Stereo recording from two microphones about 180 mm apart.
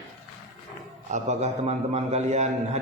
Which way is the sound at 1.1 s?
40° right (ahead or behind).